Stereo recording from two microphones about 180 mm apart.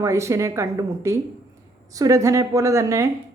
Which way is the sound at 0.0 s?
15° right (ahead or behind).